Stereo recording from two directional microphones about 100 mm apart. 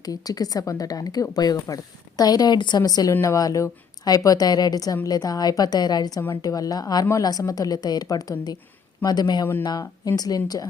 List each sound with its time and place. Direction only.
0.0 s speech: 40° left (ahead or behind)
3.1 s speech: 30° left (ahead or behind)